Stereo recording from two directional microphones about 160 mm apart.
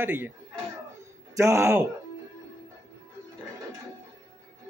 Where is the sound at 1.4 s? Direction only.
20° right (ahead or behind).